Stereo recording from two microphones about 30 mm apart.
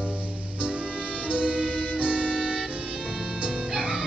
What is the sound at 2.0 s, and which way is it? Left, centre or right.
Music, right.